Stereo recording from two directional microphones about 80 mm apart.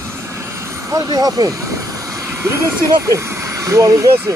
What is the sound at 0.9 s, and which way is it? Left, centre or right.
Speech, right.